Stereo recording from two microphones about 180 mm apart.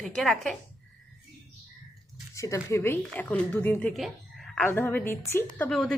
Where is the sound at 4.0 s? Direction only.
Centre (ahead or behind).